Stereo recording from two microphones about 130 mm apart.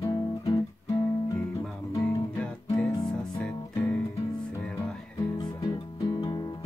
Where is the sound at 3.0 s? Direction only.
10° left (ahead or behind).